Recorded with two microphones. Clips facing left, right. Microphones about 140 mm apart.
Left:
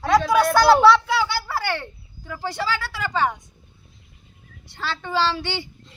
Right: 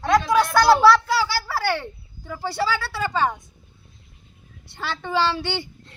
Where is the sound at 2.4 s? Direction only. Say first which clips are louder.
Right 2 dB; 15° left (ahead or behind).